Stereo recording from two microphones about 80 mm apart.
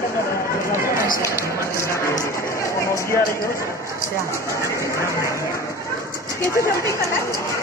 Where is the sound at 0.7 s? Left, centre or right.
Right.